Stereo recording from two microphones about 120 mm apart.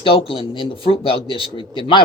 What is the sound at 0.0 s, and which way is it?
A man's voice, 50° left (ahead or behind).